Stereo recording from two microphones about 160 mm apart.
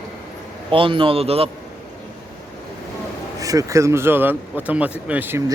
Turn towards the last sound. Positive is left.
turn(degrees=-15)  # may be behind; listen again after turning